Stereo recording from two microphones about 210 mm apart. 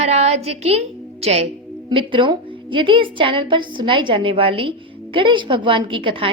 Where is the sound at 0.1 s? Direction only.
30° right (ahead or behind).